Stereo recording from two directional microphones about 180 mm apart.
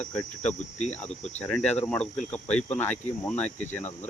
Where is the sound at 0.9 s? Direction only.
5° left (ahead or behind).